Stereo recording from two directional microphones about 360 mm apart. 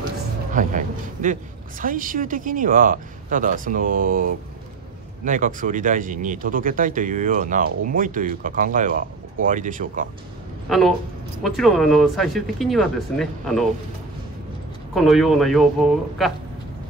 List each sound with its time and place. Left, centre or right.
0.5 s speech: right
10.7 s speech: centre
15.0 s speech: centre